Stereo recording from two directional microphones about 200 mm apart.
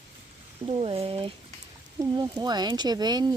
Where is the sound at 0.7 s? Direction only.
30° right (ahead or behind).